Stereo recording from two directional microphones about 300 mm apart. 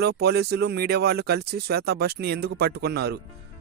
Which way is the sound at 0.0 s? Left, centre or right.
Right.